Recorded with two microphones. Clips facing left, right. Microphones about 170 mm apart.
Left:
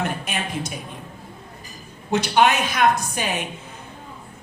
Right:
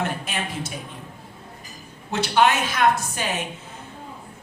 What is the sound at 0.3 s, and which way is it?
Speech, 15° left (ahead or behind).